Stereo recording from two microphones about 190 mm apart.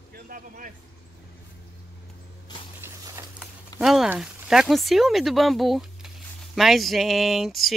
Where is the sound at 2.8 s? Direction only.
15° right (ahead or behind).